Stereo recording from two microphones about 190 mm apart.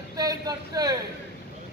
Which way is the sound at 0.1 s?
20° right (ahead or behind).